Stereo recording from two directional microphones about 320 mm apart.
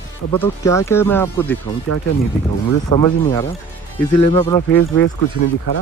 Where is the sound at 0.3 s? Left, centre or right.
Centre.